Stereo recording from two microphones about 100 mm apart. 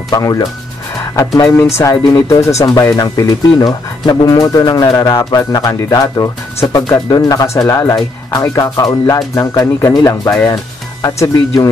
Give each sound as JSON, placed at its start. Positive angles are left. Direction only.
{"t": 0.1, "sound": "speech", "side_deg": 35}